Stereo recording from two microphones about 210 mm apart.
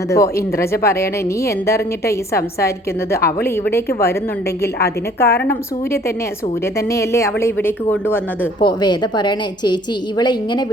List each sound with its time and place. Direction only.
0.1 s a woman's voice: 15° left (ahead or behind)
4.6 s a woman's voice: 50° left (ahead or behind)
6.7 s a woman's voice: 15° left (ahead or behind)
8.6 s a woman's voice: 20° left (ahead or behind)